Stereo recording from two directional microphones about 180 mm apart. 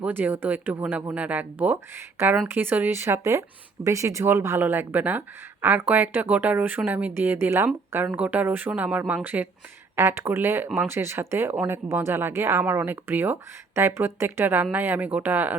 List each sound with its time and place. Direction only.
0.0 s speech: 10° right (ahead or behind)